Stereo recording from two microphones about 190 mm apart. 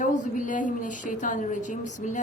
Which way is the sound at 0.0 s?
45° left (ahead or behind).